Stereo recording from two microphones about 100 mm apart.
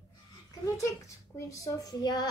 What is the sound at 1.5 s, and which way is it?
Speech, 35° left (ahead or behind).